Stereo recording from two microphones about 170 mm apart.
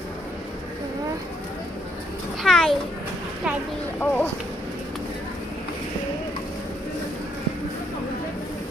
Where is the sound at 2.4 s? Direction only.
Centre (ahead or behind).